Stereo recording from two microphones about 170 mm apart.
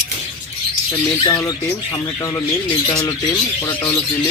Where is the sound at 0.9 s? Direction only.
25° left (ahead or behind).